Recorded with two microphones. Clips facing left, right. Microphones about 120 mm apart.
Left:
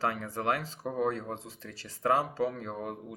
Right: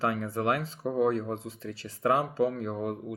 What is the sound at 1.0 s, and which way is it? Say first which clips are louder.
Speech: right 5 dB; 40° right (ahead or behind).